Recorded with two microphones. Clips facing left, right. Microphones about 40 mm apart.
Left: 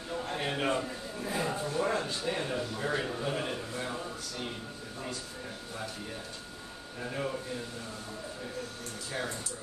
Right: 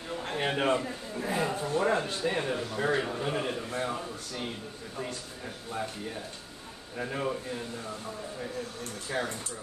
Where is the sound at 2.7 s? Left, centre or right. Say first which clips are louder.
Right 5 dB; right.